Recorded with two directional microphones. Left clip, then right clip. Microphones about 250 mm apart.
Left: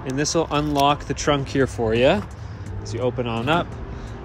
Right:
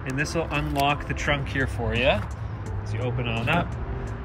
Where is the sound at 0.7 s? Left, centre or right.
Left.